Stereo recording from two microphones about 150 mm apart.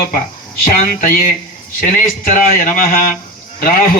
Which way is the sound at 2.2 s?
65° left (ahead or behind).